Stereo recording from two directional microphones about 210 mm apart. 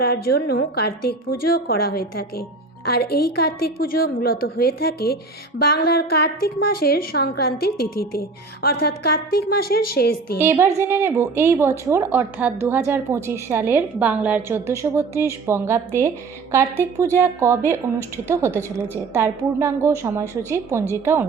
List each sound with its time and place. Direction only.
0.0 s a woman's voice: 45° left (ahead or behind)
10.4 s a woman's voice: 10° right (ahead or behind)